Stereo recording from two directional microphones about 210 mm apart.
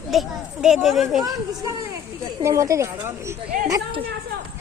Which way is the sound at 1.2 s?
15° right (ahead or behind).